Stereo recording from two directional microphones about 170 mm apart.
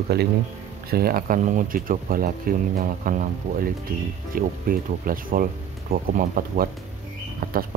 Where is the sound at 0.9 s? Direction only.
60° right (ahead or behind).